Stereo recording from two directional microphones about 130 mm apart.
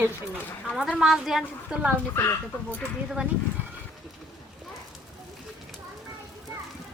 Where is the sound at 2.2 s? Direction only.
15° left (ahead or behind).